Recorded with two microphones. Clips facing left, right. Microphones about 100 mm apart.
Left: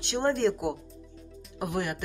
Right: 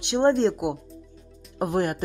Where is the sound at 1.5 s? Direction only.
40° right (ahead or behind).